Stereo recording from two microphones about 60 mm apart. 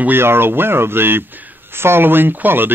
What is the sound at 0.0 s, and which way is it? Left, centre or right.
A man's voice, right.